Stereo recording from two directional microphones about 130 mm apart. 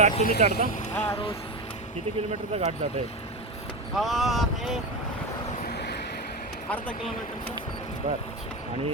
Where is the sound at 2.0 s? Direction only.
55° right (ahead or behind).